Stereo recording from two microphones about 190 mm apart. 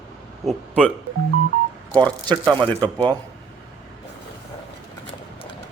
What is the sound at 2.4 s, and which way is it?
Speech, 25° right (ahead or behind).